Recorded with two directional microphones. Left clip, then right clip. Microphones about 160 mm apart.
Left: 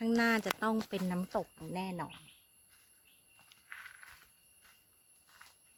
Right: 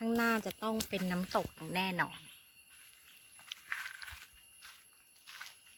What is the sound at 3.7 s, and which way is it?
Walk, 50° right (ahead or behind).